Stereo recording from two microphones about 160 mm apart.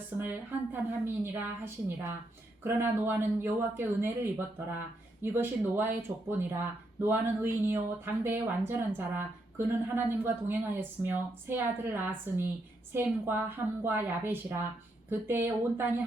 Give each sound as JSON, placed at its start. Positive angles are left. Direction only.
{"t": 0.7, "sound": "speech", "side_deg": -15}